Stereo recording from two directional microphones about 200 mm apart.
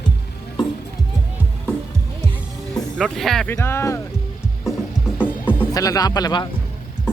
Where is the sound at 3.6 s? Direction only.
15° left (ahead or behind).